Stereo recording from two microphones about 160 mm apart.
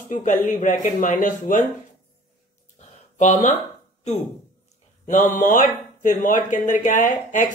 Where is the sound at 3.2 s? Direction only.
45° left (ahead or behind).